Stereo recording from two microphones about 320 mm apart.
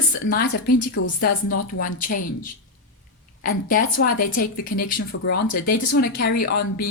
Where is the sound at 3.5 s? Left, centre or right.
Left.